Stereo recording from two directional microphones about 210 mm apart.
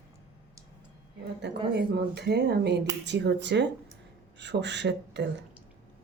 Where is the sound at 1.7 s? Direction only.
50° right (ahead or behind).